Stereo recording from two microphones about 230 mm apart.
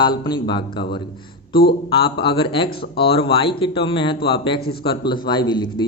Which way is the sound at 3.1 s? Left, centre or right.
Left.